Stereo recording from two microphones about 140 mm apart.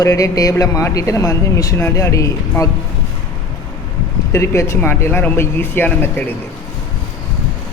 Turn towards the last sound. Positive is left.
turn(degrees=15)  # may be behind; listen again after turning